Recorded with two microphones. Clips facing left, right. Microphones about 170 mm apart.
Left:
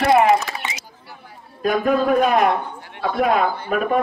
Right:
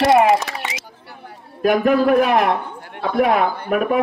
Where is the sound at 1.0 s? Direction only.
65° right (ahead or behind).